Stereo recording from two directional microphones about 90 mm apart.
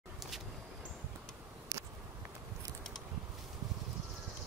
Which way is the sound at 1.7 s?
40° right (ahead or behind).